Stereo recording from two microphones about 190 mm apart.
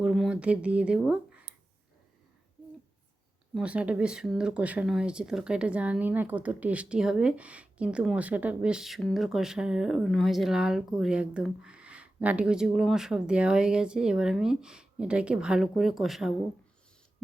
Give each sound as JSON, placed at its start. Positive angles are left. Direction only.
{"t": 0.0, "sound": "speech", "side_deg": -5}
{"t": 3.5, "sound": "speech", "side_deg": -5}